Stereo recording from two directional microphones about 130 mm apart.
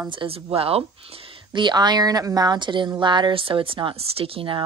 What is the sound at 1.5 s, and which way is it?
Speech, 35° right (ahead or behind).